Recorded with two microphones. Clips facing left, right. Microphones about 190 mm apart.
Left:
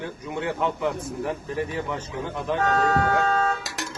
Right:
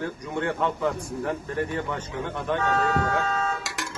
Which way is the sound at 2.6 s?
40° left (ahead or behind).